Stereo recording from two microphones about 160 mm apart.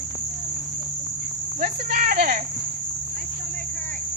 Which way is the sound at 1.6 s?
55° right (ahead or behind).